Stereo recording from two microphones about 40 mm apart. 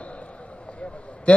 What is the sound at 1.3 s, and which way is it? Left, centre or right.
Speech, left.